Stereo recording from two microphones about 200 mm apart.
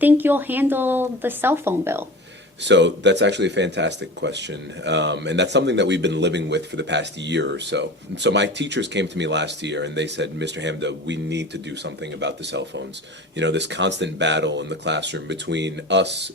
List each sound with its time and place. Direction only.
0.0 s speech: 10° right (ahead or behind)
2.6 s speech: 60° right (ahead or behind)